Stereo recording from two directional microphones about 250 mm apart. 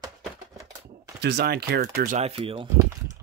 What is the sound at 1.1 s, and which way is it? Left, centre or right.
Speech, right.